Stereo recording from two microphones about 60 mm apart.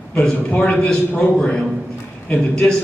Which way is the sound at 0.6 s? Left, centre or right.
Centre.